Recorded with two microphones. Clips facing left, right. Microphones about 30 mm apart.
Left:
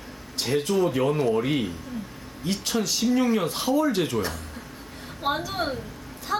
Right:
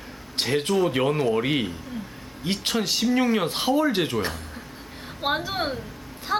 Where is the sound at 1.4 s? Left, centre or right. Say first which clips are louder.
Right 1 dB; right.